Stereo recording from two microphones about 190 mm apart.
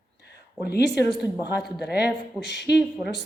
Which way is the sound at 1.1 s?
Centre (ahead or behind).